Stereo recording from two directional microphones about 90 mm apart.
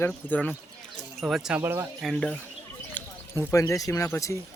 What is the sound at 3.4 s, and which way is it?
Speech, 35° left (ahead or behind).